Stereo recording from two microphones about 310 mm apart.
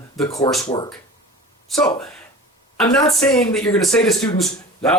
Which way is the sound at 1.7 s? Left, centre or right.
Centre.